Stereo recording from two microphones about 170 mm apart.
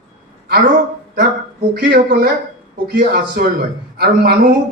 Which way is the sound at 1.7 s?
55° right (ahead or behind).